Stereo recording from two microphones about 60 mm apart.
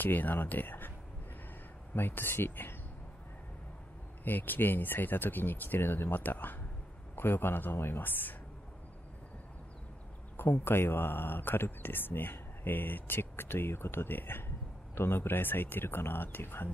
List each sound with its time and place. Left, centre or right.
0.0 s speech: left
2.0 s speech: left
4.2 s speech: left
10.3 s speech: left